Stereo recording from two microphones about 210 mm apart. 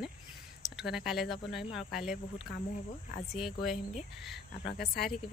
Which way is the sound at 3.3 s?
Centre (ahead or behind).